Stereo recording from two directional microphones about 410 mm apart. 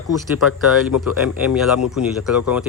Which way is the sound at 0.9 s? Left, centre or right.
Left.